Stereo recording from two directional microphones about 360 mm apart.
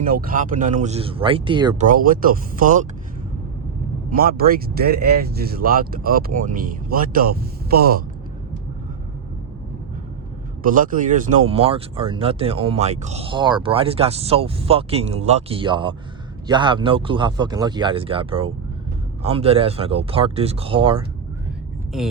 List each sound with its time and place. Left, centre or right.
0.1 s speech: right
4.1 s speech: right
10.6 s speech: right